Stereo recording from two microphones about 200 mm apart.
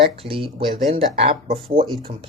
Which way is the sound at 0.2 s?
25° right (ahead or behind).